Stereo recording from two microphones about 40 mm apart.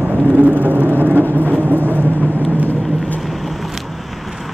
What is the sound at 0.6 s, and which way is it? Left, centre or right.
Vehicle, right.